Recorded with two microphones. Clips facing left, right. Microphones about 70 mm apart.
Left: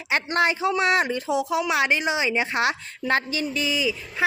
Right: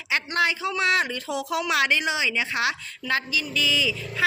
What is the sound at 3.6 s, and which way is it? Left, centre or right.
Speech, left.